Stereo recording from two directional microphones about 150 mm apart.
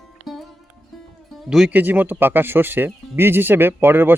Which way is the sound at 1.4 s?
5° right (ahead or behind).